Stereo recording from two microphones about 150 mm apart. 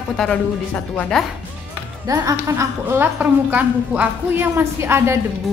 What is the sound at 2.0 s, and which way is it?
A woman's voice, 25° right (ahead or behind).